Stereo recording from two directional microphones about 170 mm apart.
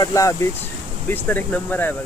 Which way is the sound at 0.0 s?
20° left (ahead or behind).